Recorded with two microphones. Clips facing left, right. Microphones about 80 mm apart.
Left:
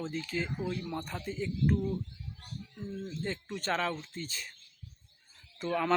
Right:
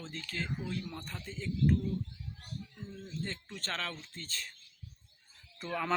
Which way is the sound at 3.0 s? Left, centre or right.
Centre.